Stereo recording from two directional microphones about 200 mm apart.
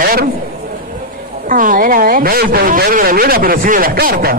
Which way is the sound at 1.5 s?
45° right (ahead or behind).